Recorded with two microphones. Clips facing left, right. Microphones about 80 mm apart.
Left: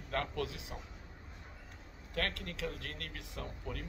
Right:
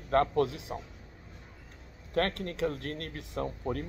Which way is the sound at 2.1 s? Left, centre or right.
Right.